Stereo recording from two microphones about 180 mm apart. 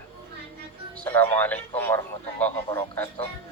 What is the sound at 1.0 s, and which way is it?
Speech, 10° left (ahead or behind).